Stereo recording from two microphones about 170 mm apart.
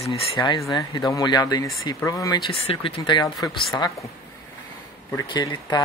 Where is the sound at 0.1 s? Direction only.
30° left (ahead or behind).